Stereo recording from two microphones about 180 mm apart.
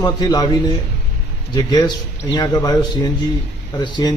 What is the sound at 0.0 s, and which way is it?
Speech, 20° left (ahead or behind).